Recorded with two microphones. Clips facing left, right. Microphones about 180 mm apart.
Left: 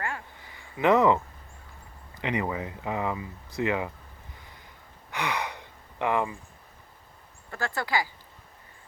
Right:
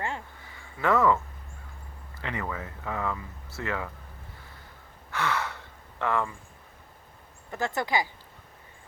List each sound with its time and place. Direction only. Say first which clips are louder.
0.8 s speech: left 3 dB; 20° left (ahead or behind)
5.1 s gasp: right 1 dB; 15° left (ahead or behind)
7.5 s speech: right 1 dB; 20° right (ahead or behind)